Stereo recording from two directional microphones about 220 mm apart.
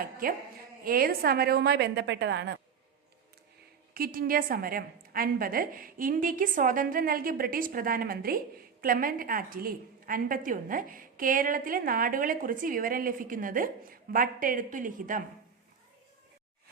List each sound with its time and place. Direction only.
0.0 s a woman's voice: 40° right (ahead or behind)
3.9 s a woman's voice: 40° right (ahead or behind)